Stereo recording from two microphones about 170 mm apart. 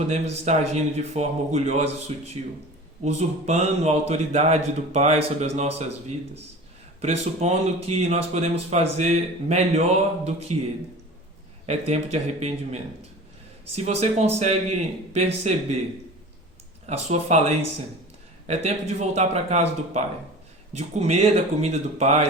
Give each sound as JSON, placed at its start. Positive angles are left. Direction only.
{"t": 0.1, "sound": "speech", "side_deg": -40}
{"t": 7.0, "sound": "speech", "side_deg": -40}
{"t": 11.6, "sound": "speech", "side_deg": -40}
{"t": 16.8, "sound": "speech", "side_deg": -40}